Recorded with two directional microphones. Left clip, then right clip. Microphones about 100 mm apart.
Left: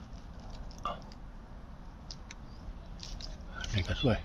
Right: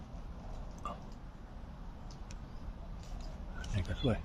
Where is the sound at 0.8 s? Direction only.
40° left (ahead or behind).